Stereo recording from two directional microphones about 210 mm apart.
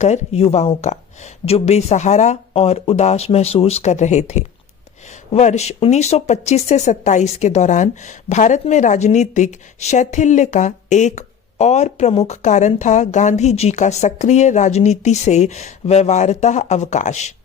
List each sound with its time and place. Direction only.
0.0 s speech: 30° left (ahead or behind)